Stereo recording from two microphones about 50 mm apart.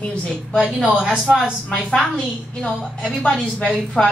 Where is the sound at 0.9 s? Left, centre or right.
Centre.